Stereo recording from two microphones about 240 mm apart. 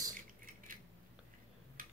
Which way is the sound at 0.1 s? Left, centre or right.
Right.